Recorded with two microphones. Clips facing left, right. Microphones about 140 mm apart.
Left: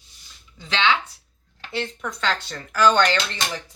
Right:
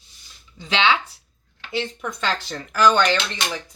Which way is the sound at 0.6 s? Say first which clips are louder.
Right 2 dB; 15° right (ahead or behind).